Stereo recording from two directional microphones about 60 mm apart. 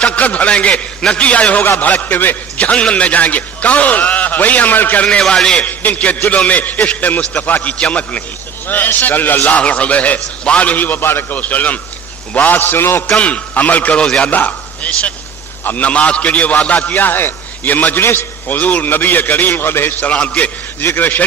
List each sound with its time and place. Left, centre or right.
0.0 s a man's voice: left
5.2 s a man's voice: centre
5.7 s a man's voice: left
11.3 s a man's voice: left
13.1 s a man's voice: left
14.0 s a man's voice: centre
14.3 s a man's voice: left
20.1 s a man's voice: left
20.8 s a man's voice: left